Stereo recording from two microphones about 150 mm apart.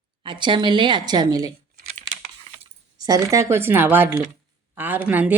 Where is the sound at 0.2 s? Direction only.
30° right (ahead or behind).